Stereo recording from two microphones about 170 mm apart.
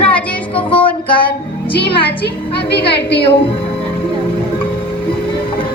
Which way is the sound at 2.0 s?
75° left (ahead or behind).